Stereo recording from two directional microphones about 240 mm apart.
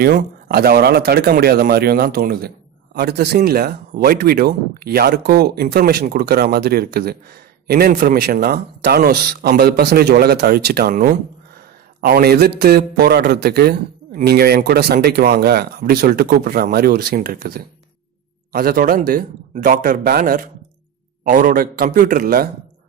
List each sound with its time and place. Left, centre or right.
0.0 s a man's voice: right